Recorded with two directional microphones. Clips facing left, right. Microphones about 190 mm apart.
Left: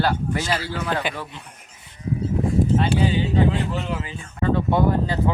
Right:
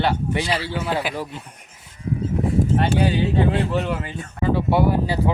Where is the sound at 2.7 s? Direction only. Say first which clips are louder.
Right 1 dB; 55° right (ahead or behind).